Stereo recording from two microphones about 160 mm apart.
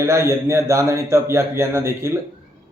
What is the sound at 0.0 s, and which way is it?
Speech, 15° right (ahead or behind).